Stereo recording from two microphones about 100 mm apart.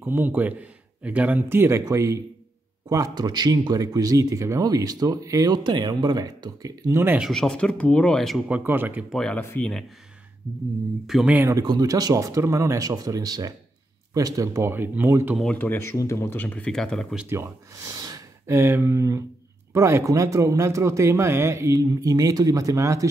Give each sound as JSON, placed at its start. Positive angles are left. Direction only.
{"t": 0.0, "sound": "speech", "side_deg": -20}
{"t": 3.2, "sound": "speech", "side_deg": -45}
{"t": 7.3, "sound": "speech", "side_deg": 5}
{"t": 8.4, "sound": "speech", "side_deg": -15}
{"t": 9.1, "sound": "speech", "side_deg": 5}
{"t": 11.1, "sound": "speech", "side_deg": 0}
{"t": 11.5, "sound": "speech", "side_deg": -40}
{"t": 14.7, "sound": "speech", "side_deg": -20}
{"t": 15.5, "sound": "speech", "side_deg": 20}
{"t": 16.3, "sound": "speech", "side_deg": 15}
{"t": 17.3, "sound": "speech", "side_deg": -30}